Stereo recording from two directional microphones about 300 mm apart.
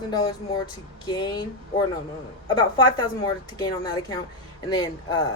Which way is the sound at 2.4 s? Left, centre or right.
Centre.